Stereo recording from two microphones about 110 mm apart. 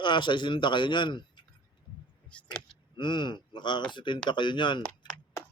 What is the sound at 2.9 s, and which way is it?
A man's voice, 45° left (ahead or behind).